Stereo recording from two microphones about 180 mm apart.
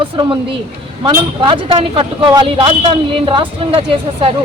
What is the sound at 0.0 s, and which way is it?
Speech, 30° right (ahead or behind).